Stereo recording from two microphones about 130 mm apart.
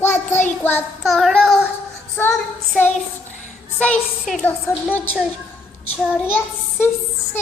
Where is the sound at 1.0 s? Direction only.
Centre (ahead or behind).